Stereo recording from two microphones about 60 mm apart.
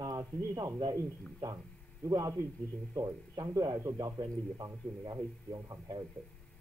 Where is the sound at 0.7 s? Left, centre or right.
Right.